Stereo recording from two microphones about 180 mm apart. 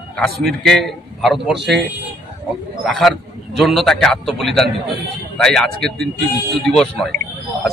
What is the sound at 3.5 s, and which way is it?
Speech, centre (ahead or behind).